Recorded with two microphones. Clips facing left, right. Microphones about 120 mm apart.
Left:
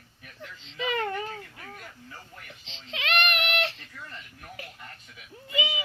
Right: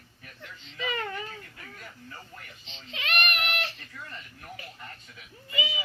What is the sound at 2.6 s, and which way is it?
Baby cry, 90° left.